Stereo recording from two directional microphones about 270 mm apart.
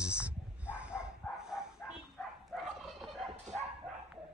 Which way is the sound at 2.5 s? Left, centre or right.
Centre.